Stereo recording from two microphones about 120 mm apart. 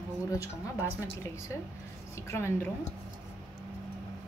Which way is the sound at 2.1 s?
25° left (ahead or behind).